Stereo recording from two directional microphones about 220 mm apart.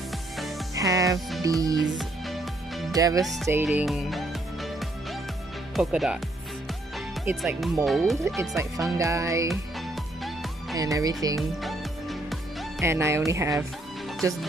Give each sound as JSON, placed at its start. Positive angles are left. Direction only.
{"t": 0.4, "sound": "music", "side_deg": 0}
{"t": 0.7, "sound": "music", "side_deg": -15}
{"t": 1.4, "sound": "speech", "side_deg": -15}
{"t": 1.8, "sound": "music", "side_deg": 0}
{"t": 2.9, "sound": "speech", "side_deg": -15}
{"t": 3.6, "sound": "music", "side_deg": 0}
{"t": 5.8, "sound": "speech", "side_deg": 0}
{"t": 7.2, "sound": "speech", "side_deg": -5}
{"t": 8.4, "sound": "speech", "side_deg": -15}
{"t": 9.5, "sound": "music", "side_deg": 0}
{"t": 10.8, "sound": "speech", "side_deg": -15}
{"t": 11.3, "sound": "music", "side_deg": 0}
{"t": 12.8, "sound": "speech", "side_deg": -10}